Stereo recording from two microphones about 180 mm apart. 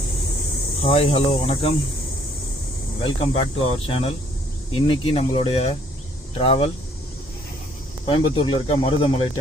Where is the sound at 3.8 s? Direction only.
30° left (ahead or behind).